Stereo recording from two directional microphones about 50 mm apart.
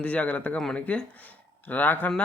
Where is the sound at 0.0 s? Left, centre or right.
Left.